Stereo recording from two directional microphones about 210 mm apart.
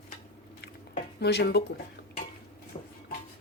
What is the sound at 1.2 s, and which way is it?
Speech, 50° left (ahead or behind).